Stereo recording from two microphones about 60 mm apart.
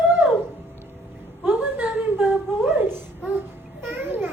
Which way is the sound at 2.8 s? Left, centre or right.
Right.